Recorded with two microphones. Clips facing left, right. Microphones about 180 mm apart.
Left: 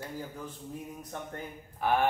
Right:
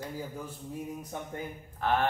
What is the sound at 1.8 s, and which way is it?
Speech, 10° left (ahead or behind).